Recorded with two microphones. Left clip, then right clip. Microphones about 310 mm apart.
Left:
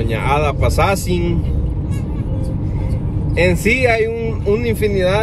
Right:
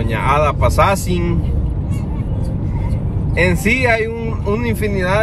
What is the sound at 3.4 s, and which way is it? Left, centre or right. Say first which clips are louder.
Speech: left 1 dB; right.